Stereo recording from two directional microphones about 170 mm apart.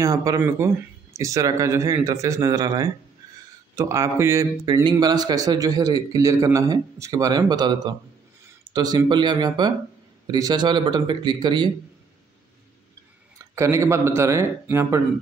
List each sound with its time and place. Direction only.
0.0 s a man's voice: 20° right (ahead or behind)
13.4 s speech: 15° right (ahead or behind)